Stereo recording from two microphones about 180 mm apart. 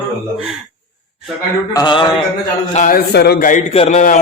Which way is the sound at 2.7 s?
45° left (ahead or behind).